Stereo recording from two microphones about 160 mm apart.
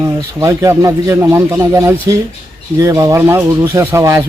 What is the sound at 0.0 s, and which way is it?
A man's voice, 20° right (ahead or behind).